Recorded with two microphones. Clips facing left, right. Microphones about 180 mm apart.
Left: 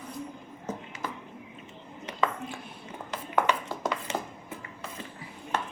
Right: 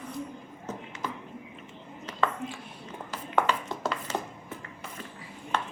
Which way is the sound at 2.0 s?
15° left (ahead or behind).